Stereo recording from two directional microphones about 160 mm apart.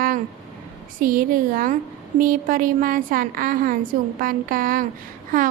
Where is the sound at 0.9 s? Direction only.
60° right (ahead or behind).